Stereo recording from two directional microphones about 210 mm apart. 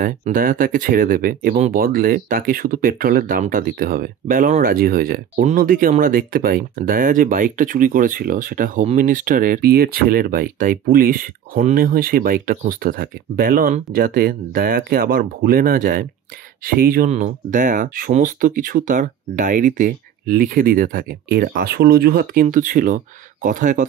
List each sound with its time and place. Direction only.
0.0 s speech: 40° right (ahead or behind)